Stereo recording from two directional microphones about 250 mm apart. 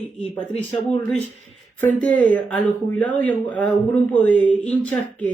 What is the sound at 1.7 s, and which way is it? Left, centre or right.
Speech, centre.